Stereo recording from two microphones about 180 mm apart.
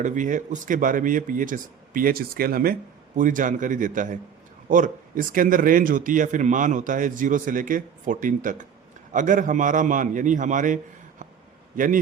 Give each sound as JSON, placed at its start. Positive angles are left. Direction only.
{"t": 0.0, "sound": "a man's voice", "side_deg": -45}